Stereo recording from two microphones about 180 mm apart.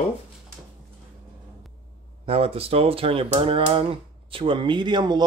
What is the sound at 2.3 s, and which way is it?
Speech, 35° right (ahead or behind).